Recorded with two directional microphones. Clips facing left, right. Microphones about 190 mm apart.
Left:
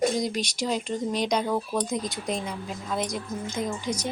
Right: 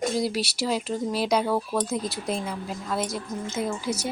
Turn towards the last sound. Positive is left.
turn(degrees=-10)  # may be behind; listen again after turning